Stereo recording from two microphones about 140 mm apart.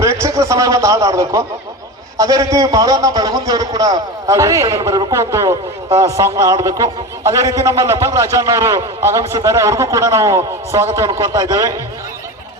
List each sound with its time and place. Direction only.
0.0 s a man's voice: 20° right (ahead or behind)